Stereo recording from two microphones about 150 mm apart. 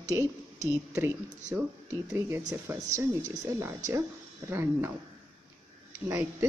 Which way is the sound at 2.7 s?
15° right (ahead or behind).